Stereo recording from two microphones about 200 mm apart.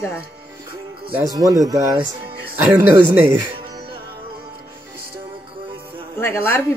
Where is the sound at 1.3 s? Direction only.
15° right (ahead or behind).